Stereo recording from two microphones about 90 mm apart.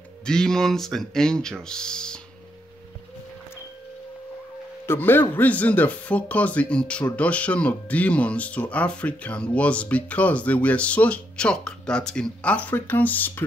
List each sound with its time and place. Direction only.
0.2 s speech: 5° left (ahead or behind)
4.8 s a man's voice: 25° left (ahead or behind)